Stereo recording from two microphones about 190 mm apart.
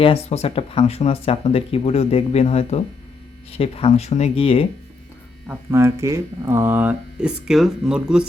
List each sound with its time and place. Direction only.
0.0 s speech: 35° left (ahead or behind)
5.5 s speech: 15° right (ahead or behind)